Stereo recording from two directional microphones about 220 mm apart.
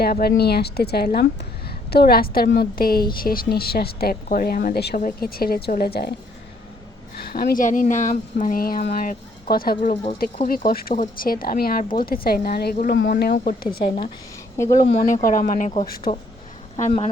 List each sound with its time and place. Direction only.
0.0 s a woman's voice: 45° left (ahead or behind)
7.2 s a woman's voice: 45° left (ahead or behind)
14.5 s speech: 15° left (ahead or behind)
14.9 s a woman's voice: 35° left (ahead or behind)